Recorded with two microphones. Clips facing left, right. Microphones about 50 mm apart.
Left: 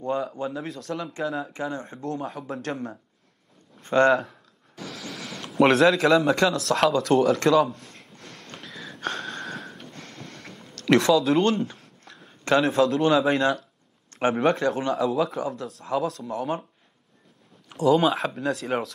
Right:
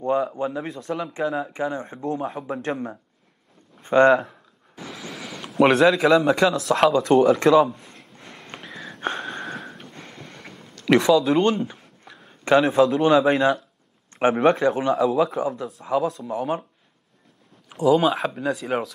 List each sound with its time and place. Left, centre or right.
0.1 s speech: centre
0.5 s speech: centre
1.5 s a man's voice: centre
9.0 s wheeze: centre
10.7 s speech: centre
17.6 s speech: centre